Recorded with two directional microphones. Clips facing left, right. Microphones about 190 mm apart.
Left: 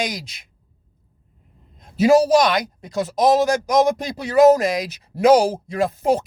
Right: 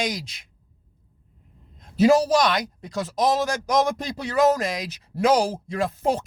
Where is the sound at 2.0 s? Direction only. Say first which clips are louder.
Left 3 dB; 15° left (ahead or behind).